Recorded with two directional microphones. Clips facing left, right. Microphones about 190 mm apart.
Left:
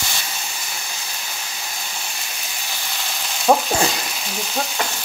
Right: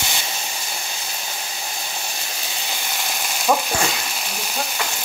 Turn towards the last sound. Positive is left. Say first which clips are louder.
# left 3 dB
turn(degrees=35)  # may be behind; listen again after turning